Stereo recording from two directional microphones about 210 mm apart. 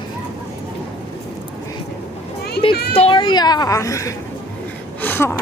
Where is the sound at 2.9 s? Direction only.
25° left (ahead or behind).